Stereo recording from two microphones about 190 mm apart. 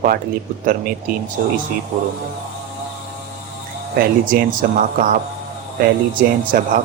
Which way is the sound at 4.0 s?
50° right (ahead or behind).